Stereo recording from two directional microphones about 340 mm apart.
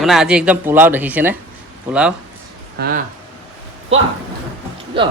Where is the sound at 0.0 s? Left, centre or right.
Centre.